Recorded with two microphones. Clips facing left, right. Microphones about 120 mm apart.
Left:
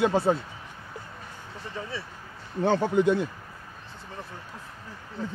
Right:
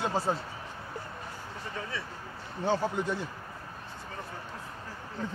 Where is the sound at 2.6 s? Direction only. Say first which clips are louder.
Left 7 dB; 65° left (ahead or behind).